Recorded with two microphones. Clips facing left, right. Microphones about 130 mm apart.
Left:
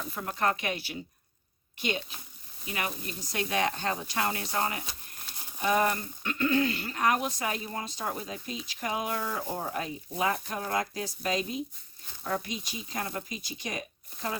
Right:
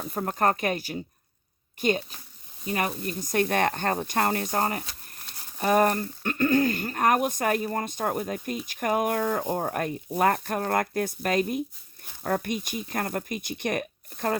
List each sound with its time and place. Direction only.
0.1 s speech: 45° right (ahead or behind)